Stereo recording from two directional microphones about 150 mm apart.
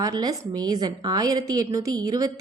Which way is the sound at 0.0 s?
25° right (ahead or behind).